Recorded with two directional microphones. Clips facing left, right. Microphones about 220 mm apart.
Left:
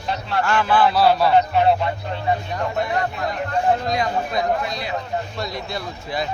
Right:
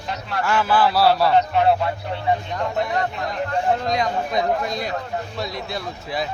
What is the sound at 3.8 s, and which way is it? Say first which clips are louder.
Speech: even; 5° left (ahead or behind).